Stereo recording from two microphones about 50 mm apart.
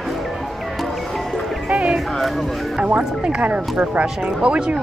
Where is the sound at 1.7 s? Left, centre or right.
Right.